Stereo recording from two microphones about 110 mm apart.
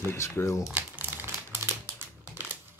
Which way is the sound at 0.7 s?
15° right (ahead or behind).